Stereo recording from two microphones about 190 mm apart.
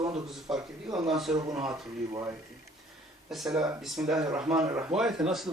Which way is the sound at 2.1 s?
15° right (ahead or behind).